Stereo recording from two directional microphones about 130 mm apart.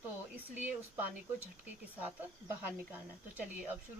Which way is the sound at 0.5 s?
10° right (ahead or behind).